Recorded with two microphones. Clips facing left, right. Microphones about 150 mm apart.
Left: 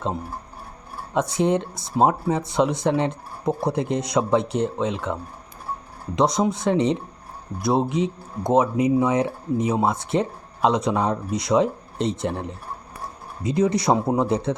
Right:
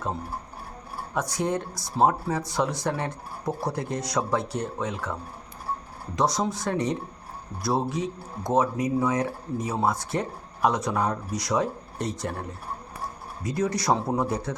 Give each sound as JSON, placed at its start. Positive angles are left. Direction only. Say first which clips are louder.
{"t": 1.1, "sound": "speech", "louder": "left 6 dB", "side_deg": 20}